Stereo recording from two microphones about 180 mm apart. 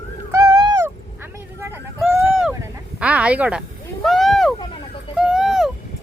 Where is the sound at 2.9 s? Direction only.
5° right (ahead or behind).